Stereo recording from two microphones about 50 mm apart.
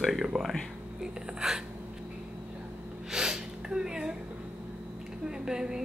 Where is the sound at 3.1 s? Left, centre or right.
Centre.